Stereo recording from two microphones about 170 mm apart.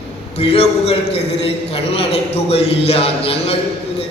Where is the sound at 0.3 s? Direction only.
35° left (ahead or behind).